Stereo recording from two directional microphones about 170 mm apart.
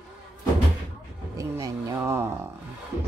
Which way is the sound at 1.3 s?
20° right (ahead or behind).